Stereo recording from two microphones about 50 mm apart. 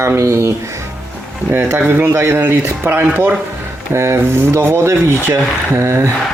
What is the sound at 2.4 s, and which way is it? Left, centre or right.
Speech, right.